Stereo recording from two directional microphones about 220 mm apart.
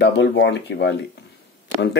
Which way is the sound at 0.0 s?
50° left (ahead or behind).